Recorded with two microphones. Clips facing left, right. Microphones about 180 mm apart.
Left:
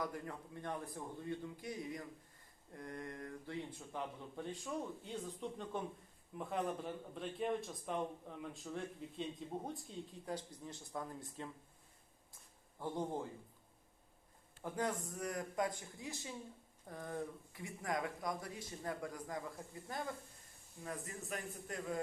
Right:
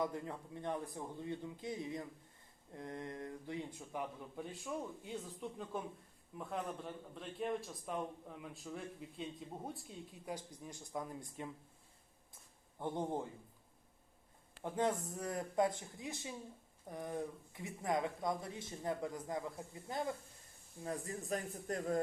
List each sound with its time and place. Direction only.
0.0 s a man's voice: 20° right (ahead or behind); by 9.2 s 5° right (ahead or behind)
10.2 s speech: 10° right (ahead or behind)
12.8 s speech: 20° right (ahead or behind)
14.6 s a man's voice: 25° right (ahead or behind); by 22.0 s 40° right (ahead or behind)